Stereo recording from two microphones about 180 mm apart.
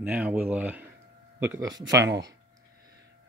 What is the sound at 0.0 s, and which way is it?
Speech, 5° right (ahead or behind).